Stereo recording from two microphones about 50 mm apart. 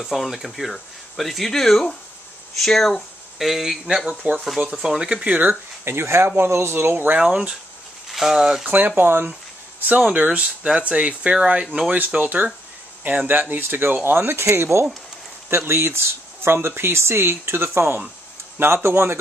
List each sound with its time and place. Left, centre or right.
0.0 s speech: centre
4.1 s speech: right
4.8 s speech: centre
5.4 s speech: right
7.2 s speech: centre
8.1 s speech: centre
8.6 s speech: right
8.9 s speech: right
9.2 s a sound: right
10.1 s speech: right
14.4 s speech: right